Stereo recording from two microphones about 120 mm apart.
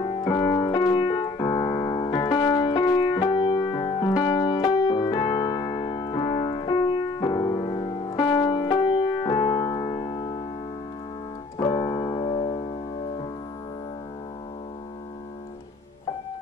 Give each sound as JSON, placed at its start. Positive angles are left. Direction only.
{"t": 0.0, "sound": "piano", "side_deg": 40}
{"t": 8.2, "sound": "music", "side_deg": 35}
{"t": 11.5, "sound": "piano", "side_deg": 35}